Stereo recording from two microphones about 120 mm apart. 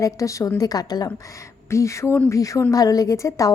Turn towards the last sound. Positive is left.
turn(degrees=25)  # may be behind; listen again after turning